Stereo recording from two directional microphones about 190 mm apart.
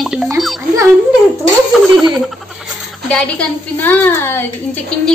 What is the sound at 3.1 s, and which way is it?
A woman's voice, 5° left (ahead or behind).